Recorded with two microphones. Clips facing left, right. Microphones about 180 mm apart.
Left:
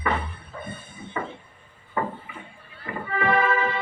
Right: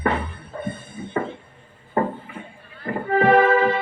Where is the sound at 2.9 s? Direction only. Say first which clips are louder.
Right 8 dB; 45° right (ahead or behind).